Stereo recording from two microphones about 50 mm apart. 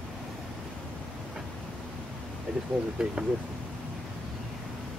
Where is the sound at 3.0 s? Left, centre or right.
Centre.